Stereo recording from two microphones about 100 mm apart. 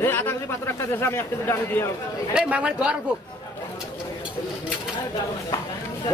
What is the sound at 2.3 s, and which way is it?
Speech, 10° right (ahead or behind).